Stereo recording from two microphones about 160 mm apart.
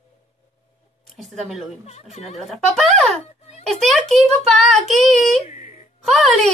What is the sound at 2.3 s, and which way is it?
A child's voice, centre (ahead or behind).